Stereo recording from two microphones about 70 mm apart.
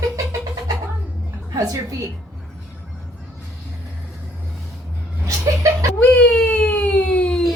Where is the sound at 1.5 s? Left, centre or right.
Right.